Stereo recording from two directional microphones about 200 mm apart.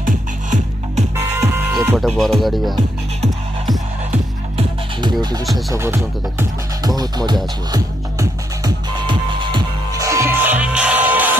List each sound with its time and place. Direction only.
0.0 s music: 40° right (ahead or behind)
1.3 s music: 10° right (ahead or behind)
2.0 s speech: centre (ahead or behind)
4.1 s music: 30° right (ahead or behind)
5.5 s speech: 15° right (ahead or behind)
7.7 s music: 20° right (ahead or behind)